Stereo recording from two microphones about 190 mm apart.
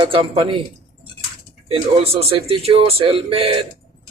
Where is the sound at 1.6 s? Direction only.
30° right (ahead or behind).